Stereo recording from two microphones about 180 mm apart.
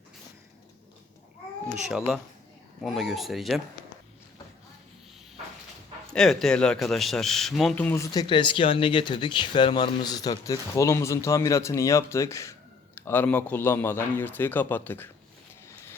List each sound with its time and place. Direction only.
1.9 s speech: centre (ahead or behind)
6.1 s speech: 5° left (ahead or behind)